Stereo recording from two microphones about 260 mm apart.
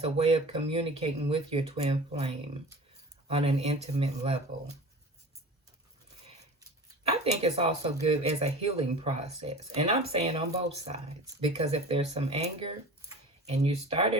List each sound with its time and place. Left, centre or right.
0.0 s speech: right
7.1 s speech: right